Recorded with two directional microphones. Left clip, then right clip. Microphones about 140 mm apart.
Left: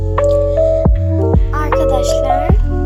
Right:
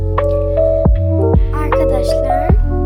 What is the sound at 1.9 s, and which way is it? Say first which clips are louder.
Music: left 1 dB; 50° right (ahead or behind).